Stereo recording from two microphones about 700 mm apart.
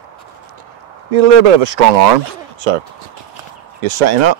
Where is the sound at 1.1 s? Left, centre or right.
Right.